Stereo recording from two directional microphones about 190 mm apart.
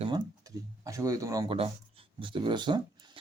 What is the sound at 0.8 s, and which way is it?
Speech, 15° right (ahead or behind).